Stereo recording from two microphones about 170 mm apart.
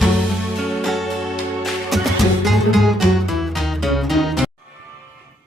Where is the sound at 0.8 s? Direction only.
Centre (ahead or behind).